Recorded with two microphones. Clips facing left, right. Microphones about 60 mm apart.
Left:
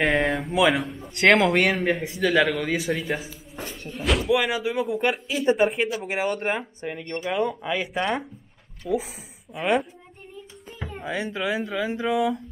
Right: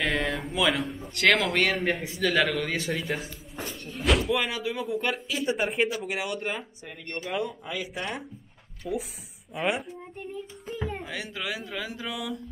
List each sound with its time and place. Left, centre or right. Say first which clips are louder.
0.0 s a sound: left 6 dB; left
0.5 s a man's voice: left 5 dB; centre
0.8 s a man's voice: even; centre
1.1 s speech: left 5 dB; centre
4.4 s a man's voice: left 5 dB; centre
5.6 s speech: left 4 dB; centre
6.0 s speech: left 6 dB; left
6.3 s speech: left 5 dB; left
8.8 s speech: left 6 dB; centre
11.1 s speech: left 7 dB; left